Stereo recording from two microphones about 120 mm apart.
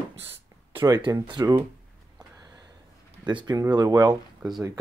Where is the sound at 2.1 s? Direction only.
35° right (ahead or behind).